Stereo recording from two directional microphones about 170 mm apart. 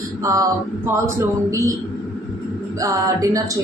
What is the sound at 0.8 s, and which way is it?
Speech, 15° right (ahead or behind).